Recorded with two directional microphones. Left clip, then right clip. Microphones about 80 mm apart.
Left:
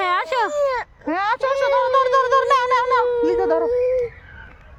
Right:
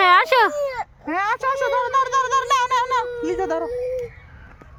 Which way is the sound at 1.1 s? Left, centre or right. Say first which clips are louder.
Left 1 dB; left.